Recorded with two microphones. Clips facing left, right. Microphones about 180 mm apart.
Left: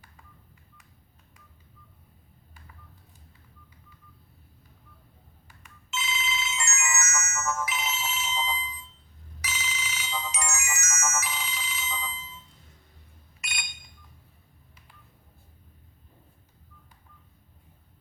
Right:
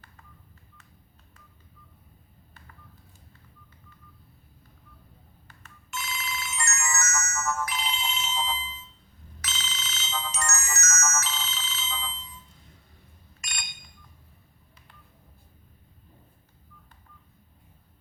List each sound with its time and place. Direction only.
5.5 s ringtone: 10° left (ahead or behind)
6.9 s ringtone: 20° left (ahead or behind)
7.6 s ringtone: 5° left (ahead or behind)